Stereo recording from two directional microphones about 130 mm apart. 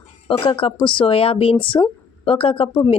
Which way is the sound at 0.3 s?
40° left (ahead or behind).